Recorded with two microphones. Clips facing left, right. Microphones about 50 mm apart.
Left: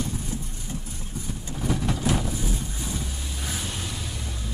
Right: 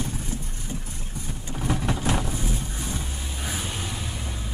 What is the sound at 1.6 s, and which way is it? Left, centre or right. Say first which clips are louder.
Vehicle: even; right.